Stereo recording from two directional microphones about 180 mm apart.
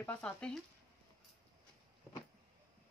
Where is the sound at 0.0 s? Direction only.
5° left (ahead or behind).